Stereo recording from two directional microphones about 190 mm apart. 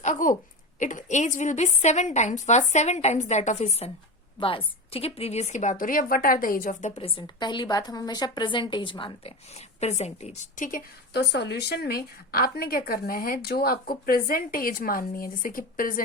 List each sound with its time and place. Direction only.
0.0 s a sound: 40° left (ahead or behind)
0.8 s a woman's voice: 40° left (ahead or behind)
11.2 s a woman's voice: 60° left (ahead or behind)